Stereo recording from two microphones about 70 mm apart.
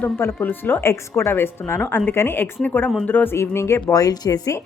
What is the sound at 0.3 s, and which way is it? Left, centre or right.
A woman's voice, left.